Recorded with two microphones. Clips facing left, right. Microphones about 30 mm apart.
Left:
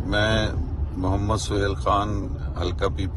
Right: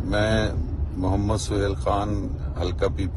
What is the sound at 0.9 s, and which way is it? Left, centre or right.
Speech, left.